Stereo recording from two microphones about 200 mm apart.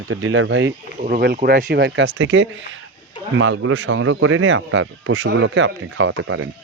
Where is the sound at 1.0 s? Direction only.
40° right (ahead or behind).